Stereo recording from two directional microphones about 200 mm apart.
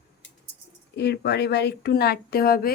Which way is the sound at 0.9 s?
55° left (ahead or behind).